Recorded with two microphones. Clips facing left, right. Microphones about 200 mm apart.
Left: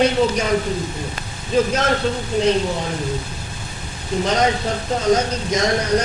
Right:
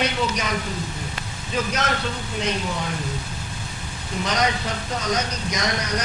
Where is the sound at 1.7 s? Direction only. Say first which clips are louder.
Left 6 dB; 30° left (ahead or behind).